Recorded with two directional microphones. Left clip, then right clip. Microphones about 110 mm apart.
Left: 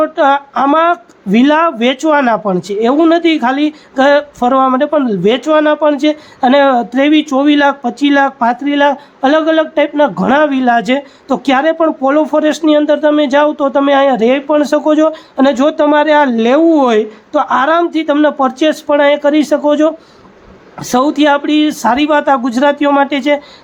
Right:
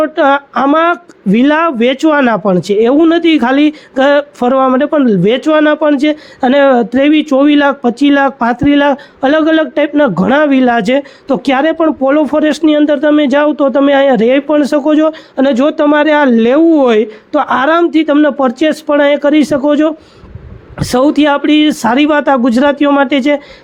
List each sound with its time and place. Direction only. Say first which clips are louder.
0.0 s speech: right 1 dB; 30° right (ahead or behind)